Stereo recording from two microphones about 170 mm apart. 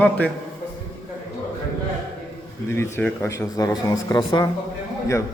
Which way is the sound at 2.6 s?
15° left (ahead or behind).